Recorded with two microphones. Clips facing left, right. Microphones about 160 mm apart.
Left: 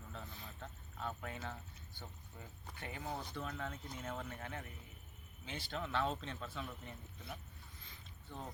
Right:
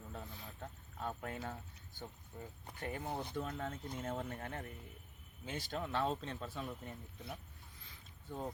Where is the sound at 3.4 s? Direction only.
35° right (ahead or behind).